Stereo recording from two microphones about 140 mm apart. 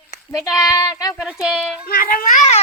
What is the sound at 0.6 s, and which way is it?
Child singing, 20° left (ahead or behind).